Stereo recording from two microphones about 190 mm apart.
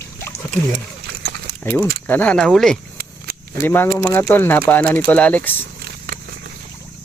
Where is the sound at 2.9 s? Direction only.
55° right (ahead or behind).